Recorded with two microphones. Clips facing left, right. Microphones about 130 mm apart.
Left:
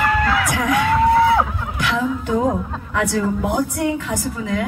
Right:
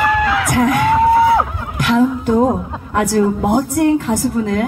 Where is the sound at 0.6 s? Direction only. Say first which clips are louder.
Right 8 dB; 45° right (ahead or behind).